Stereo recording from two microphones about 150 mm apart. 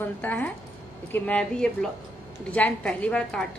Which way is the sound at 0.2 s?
10° left (ahead or behind).